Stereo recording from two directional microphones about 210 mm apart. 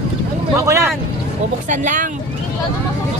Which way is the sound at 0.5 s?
15° right (ahead or behind).